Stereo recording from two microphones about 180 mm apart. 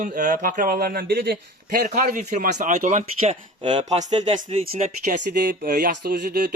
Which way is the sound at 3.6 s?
25° right (ahead or behind).